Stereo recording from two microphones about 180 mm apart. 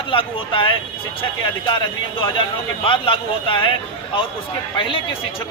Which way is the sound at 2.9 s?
30° left (ahead or behind).